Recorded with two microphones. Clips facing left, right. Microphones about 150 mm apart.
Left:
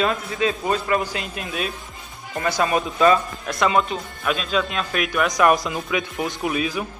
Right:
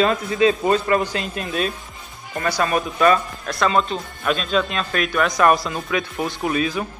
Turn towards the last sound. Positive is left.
turn(degrees=5)  # may be behind; listen again after turning